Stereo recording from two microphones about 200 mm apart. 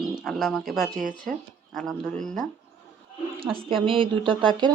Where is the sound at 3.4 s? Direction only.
25° right (ahead or behind).